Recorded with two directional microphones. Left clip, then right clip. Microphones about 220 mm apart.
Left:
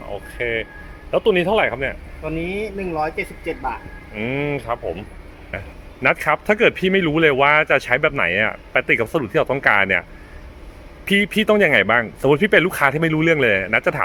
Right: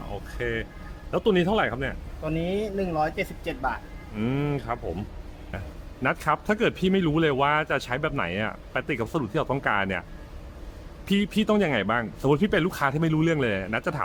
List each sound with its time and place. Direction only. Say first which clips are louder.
0.3 s speech: left 7 dB; 15° right (ahead or behind)
2.2 s speech: left 3 dB; 30° right (ahead or behind)
6.0 s a man's voice: left 7 dB; centre (ahead or behind)
11.1 s a man's voice: left 9 dB; centre (ahead or behind)